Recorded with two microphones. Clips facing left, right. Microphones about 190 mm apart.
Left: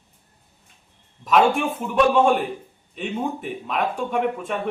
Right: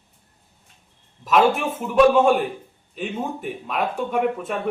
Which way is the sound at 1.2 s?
Centre (ahead or behind).